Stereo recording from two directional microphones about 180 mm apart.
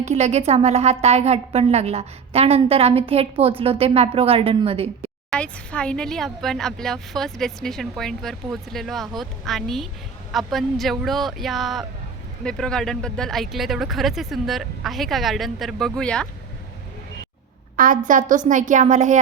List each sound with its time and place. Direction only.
0.0 s a woman's voice: 40° right (ahead or behind)
5.3 s speech: 5° left (ahead or behind)
18.0 s a woman's voice: 45° right (ahead or behind)